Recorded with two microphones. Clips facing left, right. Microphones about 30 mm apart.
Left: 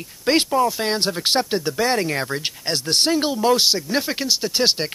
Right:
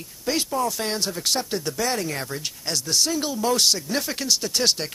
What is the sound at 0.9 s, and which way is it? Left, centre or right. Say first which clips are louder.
Speech: left 5 dB; left.